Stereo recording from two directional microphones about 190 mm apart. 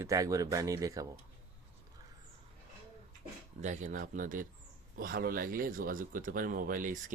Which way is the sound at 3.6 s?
40° right (ahead or behind).